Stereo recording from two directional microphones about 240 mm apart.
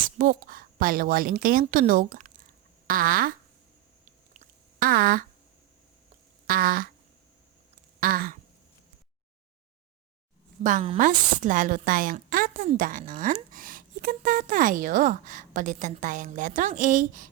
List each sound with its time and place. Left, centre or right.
0.2 s a woman's voice: right
4.0 s chewing: right
6.5 s a woman's voice: right
8.0 s a woman's voice: right
10.6 s a woman's voice: right